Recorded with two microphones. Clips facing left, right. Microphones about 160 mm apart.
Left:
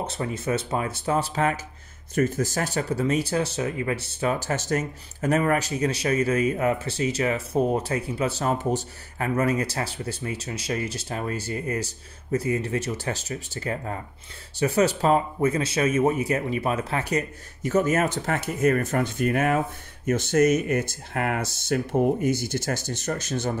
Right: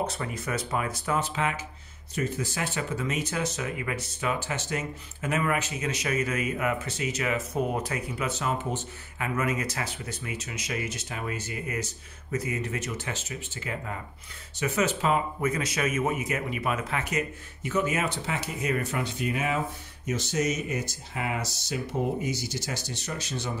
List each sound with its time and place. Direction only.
0.0 s speech: 25° left (ahead or behind); by 23.5 s 50° left (ahead or behind)